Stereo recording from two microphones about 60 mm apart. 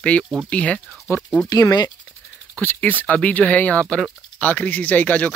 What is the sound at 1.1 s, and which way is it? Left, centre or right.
Speech, left.